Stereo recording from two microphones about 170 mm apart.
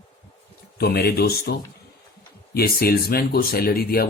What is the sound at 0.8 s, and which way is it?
Speech, 65° left (ahead or behind).